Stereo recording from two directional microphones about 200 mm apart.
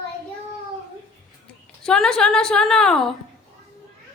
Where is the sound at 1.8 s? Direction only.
5° left (ahead or behind).